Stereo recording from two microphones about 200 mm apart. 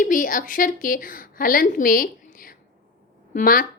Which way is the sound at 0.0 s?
40° left (ahead or behind).